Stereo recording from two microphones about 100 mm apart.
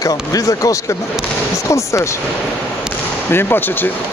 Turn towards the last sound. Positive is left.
turn(degrees=20)  # may be behind; listen again after turning